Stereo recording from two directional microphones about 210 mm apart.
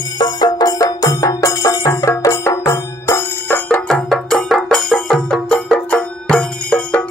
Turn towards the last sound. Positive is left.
turn(degrees=5)  # may be behind; listen again after turning